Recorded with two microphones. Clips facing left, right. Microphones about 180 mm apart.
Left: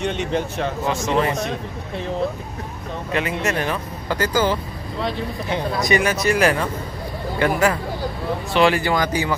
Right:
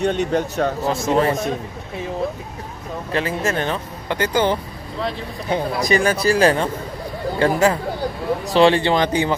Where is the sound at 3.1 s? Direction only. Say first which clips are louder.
Right 1 dB; 30° right (ahead or behind).